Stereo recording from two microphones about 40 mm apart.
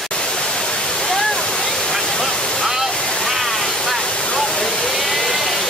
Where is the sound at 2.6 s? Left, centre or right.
Centre.